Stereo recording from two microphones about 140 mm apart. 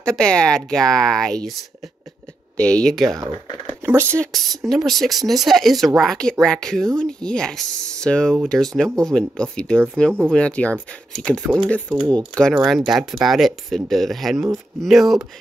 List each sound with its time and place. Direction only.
0.0 s speech: 5° left (ahead or behind)
3.3 s speech: 40° right (ahead or behind)
3.8 s speech: 20° right (ahead or behind)
4.2 s speech: centre (ahead or behind)